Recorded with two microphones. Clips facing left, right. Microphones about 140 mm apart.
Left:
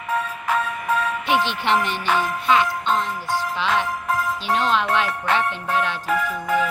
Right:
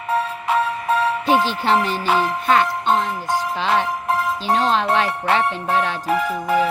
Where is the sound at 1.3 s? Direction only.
40° right (ahead or behind).